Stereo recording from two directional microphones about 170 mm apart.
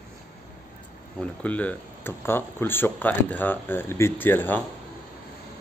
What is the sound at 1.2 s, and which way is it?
Speech, 10° left (ahead or behind).